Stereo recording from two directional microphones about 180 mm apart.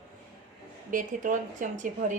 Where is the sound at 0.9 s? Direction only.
45° right (ahead or behind).